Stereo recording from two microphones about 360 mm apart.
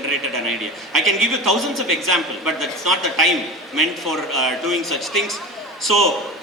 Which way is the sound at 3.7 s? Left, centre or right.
Centre.